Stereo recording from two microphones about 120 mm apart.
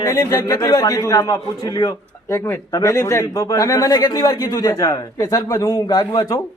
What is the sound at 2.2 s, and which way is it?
Speech, 20° left (ahead or behind).